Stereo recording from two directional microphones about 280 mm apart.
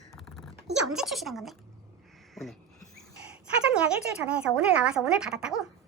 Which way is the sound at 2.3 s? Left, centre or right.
Centre.